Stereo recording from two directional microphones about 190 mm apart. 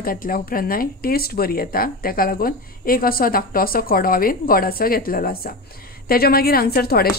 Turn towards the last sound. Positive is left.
turn(degrees=55)  # may be behind; listen again after turning